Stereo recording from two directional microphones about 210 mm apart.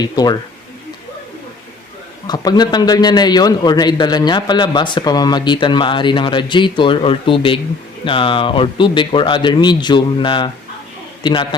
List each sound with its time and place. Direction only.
0.0 s a man's voice: 20° left (ahead or behind)
2.2 s a man's voice: 20° left (ahead or behind)